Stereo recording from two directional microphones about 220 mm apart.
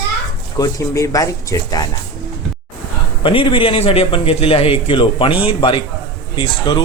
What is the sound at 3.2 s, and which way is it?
Speech, 25° left (ahead or behind).